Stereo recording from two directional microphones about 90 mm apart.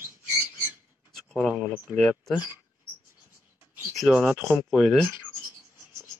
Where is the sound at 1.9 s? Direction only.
5° left (ahead or behind).